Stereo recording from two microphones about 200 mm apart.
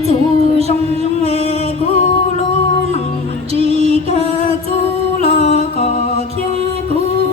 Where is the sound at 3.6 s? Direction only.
30° right (ahead or behind).